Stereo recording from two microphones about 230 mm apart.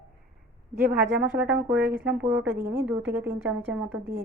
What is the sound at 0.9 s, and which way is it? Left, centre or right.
Speech, right.